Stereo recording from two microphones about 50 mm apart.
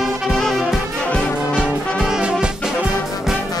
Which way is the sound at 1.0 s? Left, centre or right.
Left.